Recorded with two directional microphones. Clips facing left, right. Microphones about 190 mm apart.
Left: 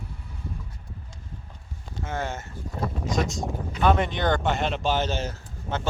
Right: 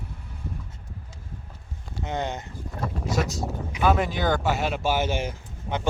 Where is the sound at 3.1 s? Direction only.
5° right (ahead or behind).